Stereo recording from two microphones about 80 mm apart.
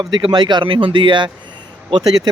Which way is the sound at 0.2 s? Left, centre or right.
Right.